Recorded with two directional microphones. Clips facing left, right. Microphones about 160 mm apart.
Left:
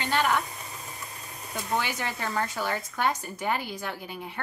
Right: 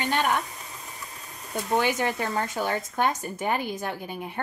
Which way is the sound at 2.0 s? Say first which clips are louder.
Right 4 dB; 20° right (ahead or behind).